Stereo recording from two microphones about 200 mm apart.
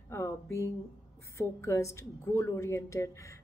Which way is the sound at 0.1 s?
15° left (ahead or behind).